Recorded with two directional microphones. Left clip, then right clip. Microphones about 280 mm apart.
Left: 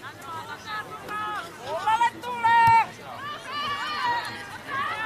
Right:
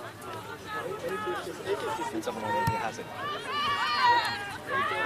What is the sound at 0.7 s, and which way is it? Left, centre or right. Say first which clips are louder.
Speech: right 2 dB; centre.